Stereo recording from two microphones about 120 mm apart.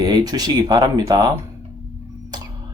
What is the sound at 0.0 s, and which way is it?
A man's voice, 35° right (ahead or behind).